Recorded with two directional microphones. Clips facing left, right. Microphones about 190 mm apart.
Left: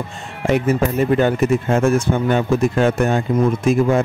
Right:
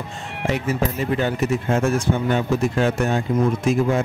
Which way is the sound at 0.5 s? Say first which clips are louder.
Left 6 dB; 55° left (ahead or behind).